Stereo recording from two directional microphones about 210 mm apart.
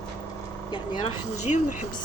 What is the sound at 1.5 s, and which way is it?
Speech, 30° left (ahead or behind).